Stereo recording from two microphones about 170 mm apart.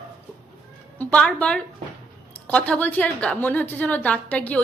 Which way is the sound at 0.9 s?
5° left (ahead or behind).